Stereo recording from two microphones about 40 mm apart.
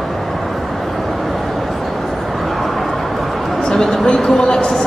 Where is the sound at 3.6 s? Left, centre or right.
Centre.